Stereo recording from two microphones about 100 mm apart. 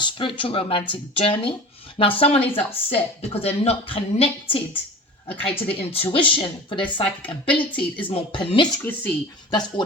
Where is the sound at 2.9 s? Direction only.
90° left; by 4.6 s 65° left (ahead or behind).